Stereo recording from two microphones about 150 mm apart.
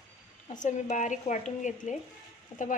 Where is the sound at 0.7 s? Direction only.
55° left (ahead or behind).